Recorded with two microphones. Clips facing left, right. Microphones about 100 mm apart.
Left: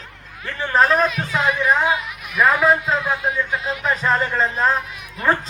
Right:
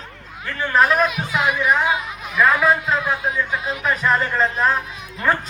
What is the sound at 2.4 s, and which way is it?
A man's voice, 25° left (ahead or behind).